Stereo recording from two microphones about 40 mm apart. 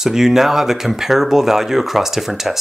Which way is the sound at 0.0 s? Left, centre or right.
Centre.